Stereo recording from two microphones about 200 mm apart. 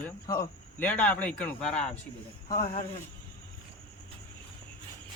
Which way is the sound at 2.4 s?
35° left (ahead or behind).